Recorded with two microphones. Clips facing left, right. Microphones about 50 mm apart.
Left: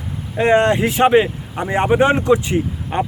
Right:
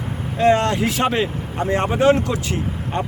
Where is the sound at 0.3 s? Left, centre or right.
Left.